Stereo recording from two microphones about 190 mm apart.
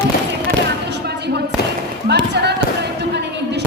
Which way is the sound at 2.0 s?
60° right (ahead or behind).